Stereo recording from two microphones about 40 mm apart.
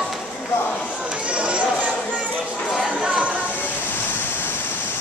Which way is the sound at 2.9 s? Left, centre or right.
Centre.